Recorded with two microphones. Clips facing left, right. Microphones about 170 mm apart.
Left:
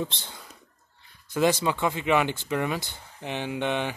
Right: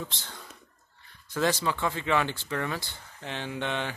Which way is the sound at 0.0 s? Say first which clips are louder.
Left 6 dB; 20° left (ahead or behind).